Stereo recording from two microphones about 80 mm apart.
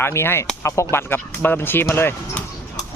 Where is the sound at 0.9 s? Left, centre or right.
Left.